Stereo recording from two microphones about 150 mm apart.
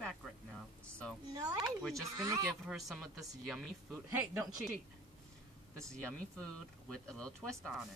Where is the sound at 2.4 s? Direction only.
5° right (ahead or behind).